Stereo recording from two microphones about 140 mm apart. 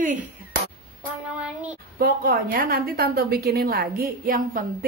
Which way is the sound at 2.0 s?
90° right.